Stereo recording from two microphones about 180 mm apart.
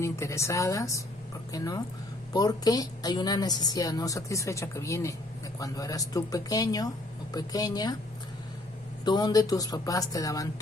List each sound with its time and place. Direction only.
0.0 s a woman's voice: 15° left (ahead or behind)
9.0 s a woman's voice: 20° left (ahead or behind)